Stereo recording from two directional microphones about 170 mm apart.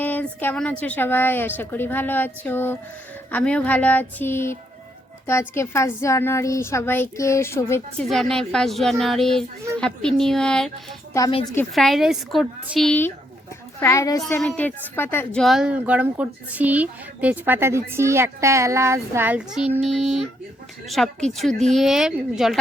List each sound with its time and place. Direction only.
0.0 s a woman's voice: 10° left (ahead or behind)
8.1 s speech: 5° left (ahead or behind)
11.7 s speech: centre (ahead or behind)
12.9 s a woman's voice: 10° left (ahead or behind)